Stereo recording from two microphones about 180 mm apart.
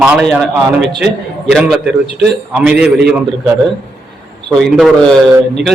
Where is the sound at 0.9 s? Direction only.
65° right (ahead or behind).